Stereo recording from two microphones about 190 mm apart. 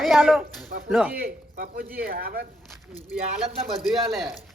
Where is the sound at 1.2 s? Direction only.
50° right (ahead or behind).